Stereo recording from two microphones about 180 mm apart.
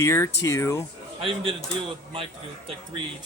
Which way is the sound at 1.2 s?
30° right (ahead or behind).